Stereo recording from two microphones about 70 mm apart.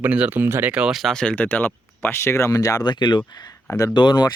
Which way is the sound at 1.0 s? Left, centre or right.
Centre.